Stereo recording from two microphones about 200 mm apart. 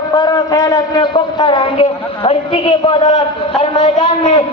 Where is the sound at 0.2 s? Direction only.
20° left (ahead or behind).